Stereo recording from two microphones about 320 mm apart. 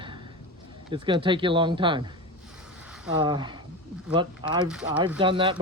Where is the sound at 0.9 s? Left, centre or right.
Centre.